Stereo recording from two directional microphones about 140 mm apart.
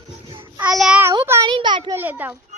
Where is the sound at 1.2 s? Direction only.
20° right (ahead or behind).